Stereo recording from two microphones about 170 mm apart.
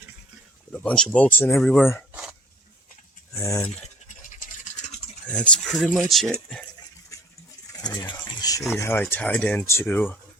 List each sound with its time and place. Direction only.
0.7 s speech: 5° left (ahead or behind)
3.3 s speech: 15° left (ahead or behind)
4.6 s a sound: 45° left (ahead or behind)
5.2 s speech: 5° left (ahead or behind)
7.7 s pigeon: 20° left (ahead or behind)
8.1 s speech: 25° left (ahead or behind)